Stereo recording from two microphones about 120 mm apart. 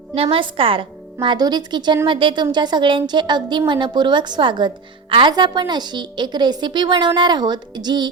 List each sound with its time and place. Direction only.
0.1 s a woman's voice: 50° right (ahead or behind); by 8.0 s 35° right (ahead or behind)